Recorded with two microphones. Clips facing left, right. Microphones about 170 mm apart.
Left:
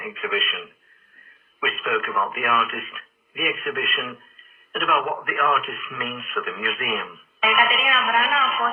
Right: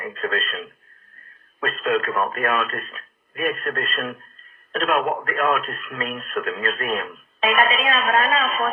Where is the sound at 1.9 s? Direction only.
30° right (ahead or behind).